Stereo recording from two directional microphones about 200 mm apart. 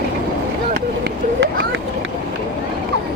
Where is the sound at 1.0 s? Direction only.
60° right (ahead or behind).